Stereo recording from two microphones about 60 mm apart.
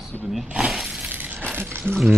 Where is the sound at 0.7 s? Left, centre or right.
Centre.